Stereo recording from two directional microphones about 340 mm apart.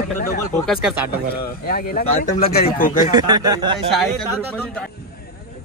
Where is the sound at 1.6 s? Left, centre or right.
Left.